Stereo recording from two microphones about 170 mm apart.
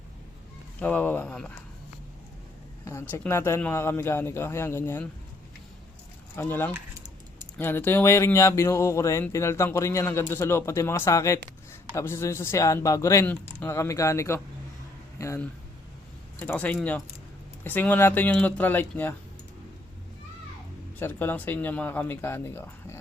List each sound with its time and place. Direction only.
0.8 s speech: 10° left (ahead or behind)
2.8 s speech: 15° left (ahead or behind)
6.3 s speech: 15° left (ahead or behind)
6.7 s typing: 20° right (ahead or behind)
7.6 s speech: 10° left (ahead or behind)
21.0 s speech: 10° left (ahead or behind)